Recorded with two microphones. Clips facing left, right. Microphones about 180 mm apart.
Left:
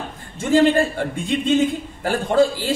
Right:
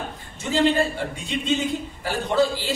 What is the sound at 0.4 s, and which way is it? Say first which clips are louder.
A woman's voice: left 5 dB; 50° left (ahead or behind).